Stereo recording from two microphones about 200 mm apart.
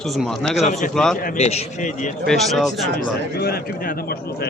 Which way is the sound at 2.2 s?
Centre (ahead or behind).